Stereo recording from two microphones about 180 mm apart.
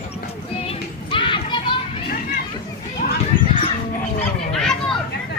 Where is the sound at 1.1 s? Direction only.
30° left (ahead or behind).